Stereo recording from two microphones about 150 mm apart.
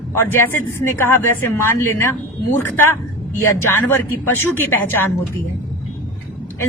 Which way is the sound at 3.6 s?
15° left (ahead or behind).